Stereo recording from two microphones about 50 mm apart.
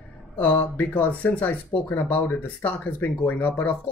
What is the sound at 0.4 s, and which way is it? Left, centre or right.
Speech, left.